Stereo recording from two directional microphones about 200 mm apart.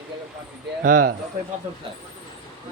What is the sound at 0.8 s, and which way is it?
Speech, 45° right (ahead or behind).